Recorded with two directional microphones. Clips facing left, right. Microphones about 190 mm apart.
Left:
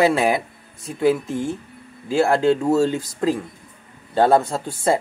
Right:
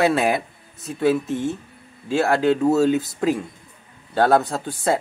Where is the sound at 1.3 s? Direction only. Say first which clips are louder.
Right 1 dB; 20° right (ahead or behind).